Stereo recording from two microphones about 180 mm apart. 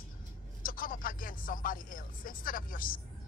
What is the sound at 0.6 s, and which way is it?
Speech, 50° left (ahead or behind).